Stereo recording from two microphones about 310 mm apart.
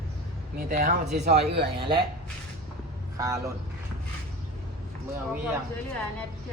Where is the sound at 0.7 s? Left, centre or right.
Right.